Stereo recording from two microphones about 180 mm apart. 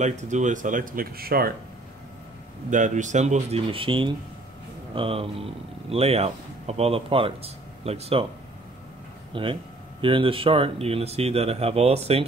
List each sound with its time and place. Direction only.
0.0 s speech: 40° right (ahead or behind); by 1.5 s 55° right (ahead or behind)
2.7 s speech: 45° right (ahead or behind)
9.3 s speech: 30° right (ahead or behind)